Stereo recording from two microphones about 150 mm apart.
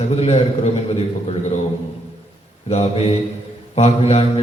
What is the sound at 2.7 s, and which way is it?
A man's voice, 45° left (ahead or behind).